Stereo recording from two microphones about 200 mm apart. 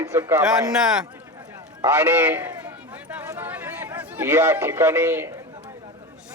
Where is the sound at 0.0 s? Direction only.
15° right (ahead or behind).